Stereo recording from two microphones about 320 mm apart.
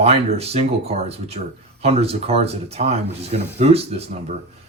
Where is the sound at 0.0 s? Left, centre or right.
Centre.